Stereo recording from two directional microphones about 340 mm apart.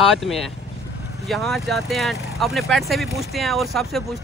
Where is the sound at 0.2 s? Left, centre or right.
Centre.